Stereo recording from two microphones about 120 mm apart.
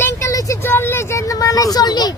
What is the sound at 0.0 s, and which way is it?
Vehicle, 25° left (ahead or behind).